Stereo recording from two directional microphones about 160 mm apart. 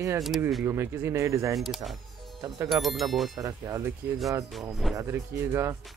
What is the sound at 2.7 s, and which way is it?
Speech, centre (ahead or behind).